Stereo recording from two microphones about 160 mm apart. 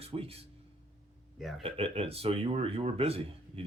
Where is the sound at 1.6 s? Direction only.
35° right (ahead or behind).